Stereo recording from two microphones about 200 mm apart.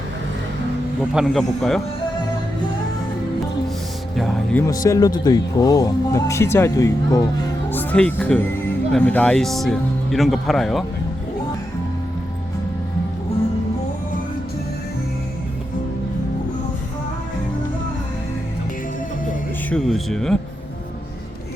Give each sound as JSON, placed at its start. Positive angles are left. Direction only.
{"t": 1.1, "sound": "speech", "side_deg": 0}
{"t": 4.9, "sound": "speech", "side_deg": 15}
{"t": 19.7, "sound": "speech", "side_deg": 0}